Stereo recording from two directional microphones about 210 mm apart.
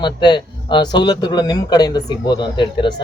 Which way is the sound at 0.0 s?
20° left (ahead or behind).